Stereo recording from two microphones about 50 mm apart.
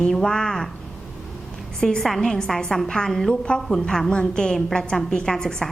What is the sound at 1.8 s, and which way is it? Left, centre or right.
A woman's voice, centre.